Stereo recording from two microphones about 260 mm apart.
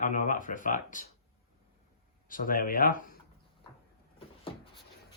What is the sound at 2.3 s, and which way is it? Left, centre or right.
Speech, left.